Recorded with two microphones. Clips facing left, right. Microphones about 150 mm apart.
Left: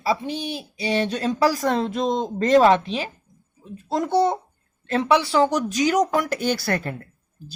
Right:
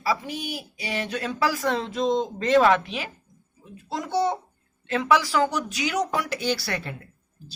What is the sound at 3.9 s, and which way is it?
Speech, 55° left (ahead or behind).